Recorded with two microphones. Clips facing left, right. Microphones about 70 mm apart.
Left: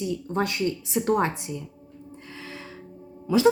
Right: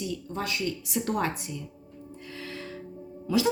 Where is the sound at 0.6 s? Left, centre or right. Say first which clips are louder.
Left 5 dB; left.